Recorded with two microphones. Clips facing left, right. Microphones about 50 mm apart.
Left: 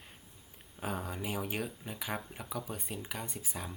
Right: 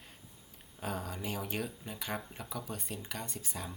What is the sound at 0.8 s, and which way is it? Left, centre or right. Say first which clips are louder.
Speech: left 1 dB; centre.